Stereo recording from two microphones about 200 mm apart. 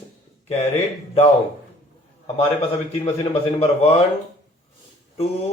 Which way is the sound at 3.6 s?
30° left (ahead or behind).